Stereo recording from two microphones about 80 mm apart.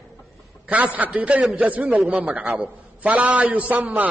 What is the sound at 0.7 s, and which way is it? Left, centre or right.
A man's voice, centre.